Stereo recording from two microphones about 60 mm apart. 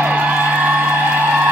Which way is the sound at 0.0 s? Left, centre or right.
Right.